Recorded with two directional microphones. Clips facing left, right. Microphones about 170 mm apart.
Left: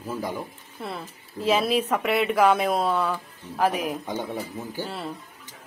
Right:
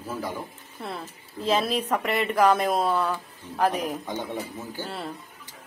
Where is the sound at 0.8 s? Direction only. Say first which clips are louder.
Left 1 dB; 5° left (ahead or behind).